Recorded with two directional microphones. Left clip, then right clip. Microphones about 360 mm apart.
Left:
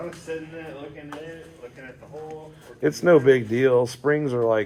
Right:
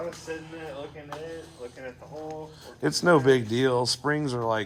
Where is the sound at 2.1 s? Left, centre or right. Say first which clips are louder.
Left 1 dB; right.